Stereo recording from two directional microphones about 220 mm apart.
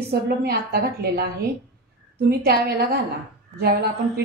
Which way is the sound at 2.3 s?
45° right (ahead or behind).